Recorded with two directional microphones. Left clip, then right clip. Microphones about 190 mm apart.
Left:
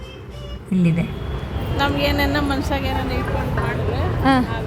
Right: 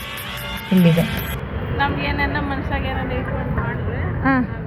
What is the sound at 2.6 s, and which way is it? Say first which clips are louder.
Speech: left 1 dB; 50° left (ahead or behind).